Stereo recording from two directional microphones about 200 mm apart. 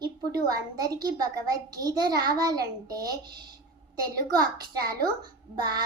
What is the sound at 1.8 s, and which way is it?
A child's voice, 20° right (ahead or behind).